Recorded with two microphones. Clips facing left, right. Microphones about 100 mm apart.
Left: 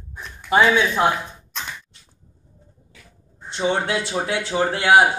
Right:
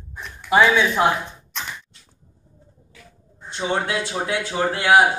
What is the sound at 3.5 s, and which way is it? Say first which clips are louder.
Speech: left 2 dB; 25° left (ahead or behind).